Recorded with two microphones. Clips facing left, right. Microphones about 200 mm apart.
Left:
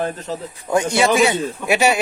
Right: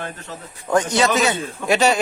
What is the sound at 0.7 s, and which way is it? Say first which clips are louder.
A man's voice: left 1 dB; 10° left (ahead or behind).